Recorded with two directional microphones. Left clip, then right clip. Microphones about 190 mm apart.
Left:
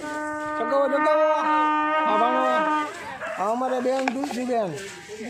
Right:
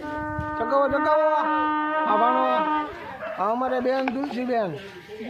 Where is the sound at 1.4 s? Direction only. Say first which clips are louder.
Left 2 dB; 55° left (ahead or behind).